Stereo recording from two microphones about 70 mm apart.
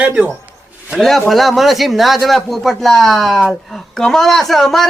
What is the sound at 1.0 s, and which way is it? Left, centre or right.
Speech, centre.